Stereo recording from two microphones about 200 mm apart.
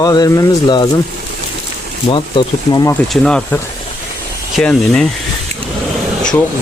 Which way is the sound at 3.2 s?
5° left (ahead or behind).